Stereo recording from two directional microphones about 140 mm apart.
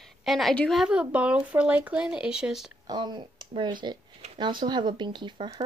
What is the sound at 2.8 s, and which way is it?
Speech, 30° right (ahead or behind).